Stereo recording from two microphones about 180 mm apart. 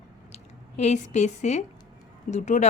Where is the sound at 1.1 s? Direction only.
40° left (ahead or behind).